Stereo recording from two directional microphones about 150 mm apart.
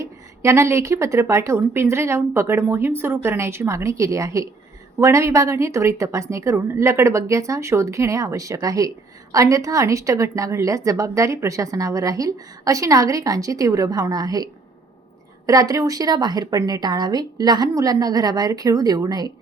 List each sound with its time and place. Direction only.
0.0 s a woman's voice: 20° right (ahead or behind)